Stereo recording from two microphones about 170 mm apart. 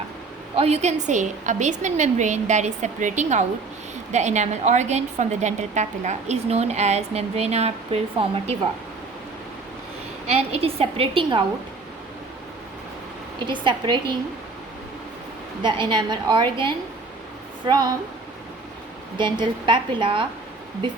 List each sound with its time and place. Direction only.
0.5 s a woman's voice: 40° right (ahead or behind)
10.2 s a woman's voice: 40° right (ahead or behind)
13.5 s a woman's voice: 25° right (ahead or behind)
15.6 s a woman's voice: 25° right (ahead or behind)
19.1 s a woman's voice: 30° right (ahead or behind)